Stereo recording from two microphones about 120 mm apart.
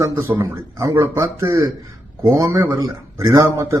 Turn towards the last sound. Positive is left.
turn(degrees=-25)  # may be behind; listen again after turning